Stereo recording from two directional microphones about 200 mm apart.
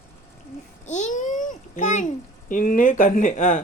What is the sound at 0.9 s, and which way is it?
A child's voice, 40° left (ahead or behind).